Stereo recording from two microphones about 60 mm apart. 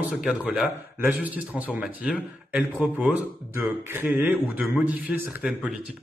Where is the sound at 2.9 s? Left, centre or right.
Right.